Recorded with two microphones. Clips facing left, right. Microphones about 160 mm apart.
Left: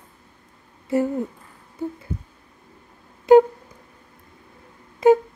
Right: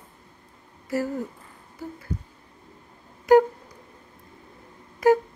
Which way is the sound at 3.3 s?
25° left (ahead or behind).